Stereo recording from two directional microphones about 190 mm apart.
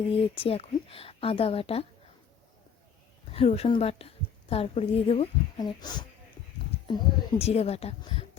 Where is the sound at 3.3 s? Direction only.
30° left (ahead or behind).